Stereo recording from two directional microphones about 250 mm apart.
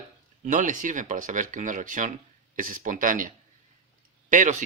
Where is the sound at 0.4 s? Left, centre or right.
Right.